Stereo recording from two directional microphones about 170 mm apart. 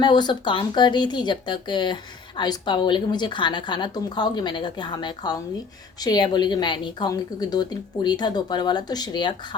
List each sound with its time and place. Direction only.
0.0 s speech: 25° left (ahead or behind)